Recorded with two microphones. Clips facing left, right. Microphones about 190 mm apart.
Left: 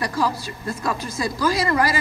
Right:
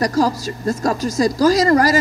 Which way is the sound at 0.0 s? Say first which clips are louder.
Right 6 dB; 40° right (ahead or behind).